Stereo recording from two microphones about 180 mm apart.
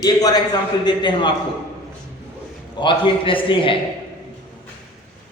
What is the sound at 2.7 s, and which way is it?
A man's voice, 30° left (ahead or behind).